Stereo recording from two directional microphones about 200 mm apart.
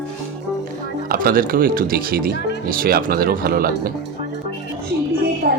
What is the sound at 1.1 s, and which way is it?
Speech, 45° right (ahead or behind).